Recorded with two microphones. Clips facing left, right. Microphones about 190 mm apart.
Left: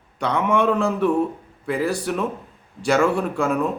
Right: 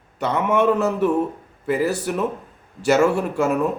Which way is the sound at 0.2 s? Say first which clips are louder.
Right 1 dB; 5° right (ahead or behind).